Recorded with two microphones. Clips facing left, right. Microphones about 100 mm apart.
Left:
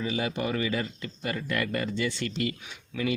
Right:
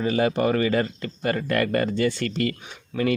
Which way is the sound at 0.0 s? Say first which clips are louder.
Right 8 dB; 50° right (ahead or behind).